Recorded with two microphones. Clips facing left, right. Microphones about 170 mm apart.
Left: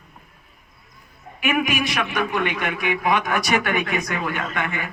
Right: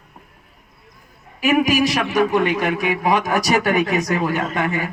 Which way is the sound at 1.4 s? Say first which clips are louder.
Right 6 dB; 40° right (ahead or behind).